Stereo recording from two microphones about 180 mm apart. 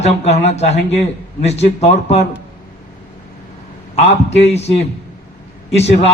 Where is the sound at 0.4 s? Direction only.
40° left (ahead or behind).